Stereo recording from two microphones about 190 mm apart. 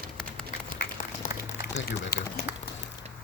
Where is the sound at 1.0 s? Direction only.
45° left (ahead or behind).